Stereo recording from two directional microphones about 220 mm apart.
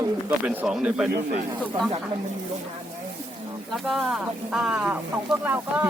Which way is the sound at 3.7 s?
Centre (ahead or behind).